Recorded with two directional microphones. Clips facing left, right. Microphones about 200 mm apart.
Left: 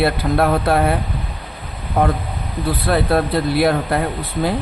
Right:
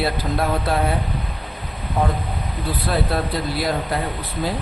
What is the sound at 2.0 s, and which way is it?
Speech, 65° left (ahead or behind).